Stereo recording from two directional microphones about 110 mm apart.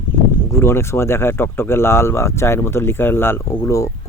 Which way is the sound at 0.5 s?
25° left (ahead or behind).